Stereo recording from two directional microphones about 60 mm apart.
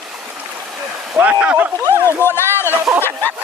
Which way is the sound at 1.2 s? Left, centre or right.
Right.